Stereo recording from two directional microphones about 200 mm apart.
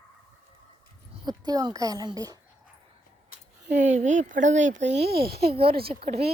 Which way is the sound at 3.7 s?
35° right (ahead or behind).